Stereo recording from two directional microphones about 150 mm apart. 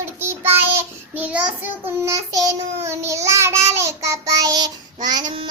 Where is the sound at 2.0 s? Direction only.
20° right (ahead or behind).